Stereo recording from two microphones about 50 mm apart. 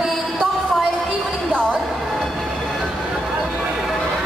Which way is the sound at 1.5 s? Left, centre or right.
Centre.